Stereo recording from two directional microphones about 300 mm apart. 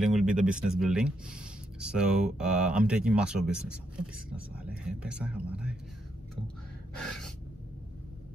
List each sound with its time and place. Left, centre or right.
0.0 s speech: centre
7.0 s gasp: centre